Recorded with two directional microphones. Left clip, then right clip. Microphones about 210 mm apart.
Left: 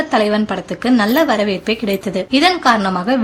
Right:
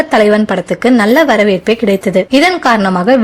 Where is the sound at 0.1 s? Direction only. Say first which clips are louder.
Right 6 dB; 30° right (ahead or behind).